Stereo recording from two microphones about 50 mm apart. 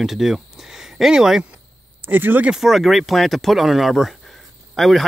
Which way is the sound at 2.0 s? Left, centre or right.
Right.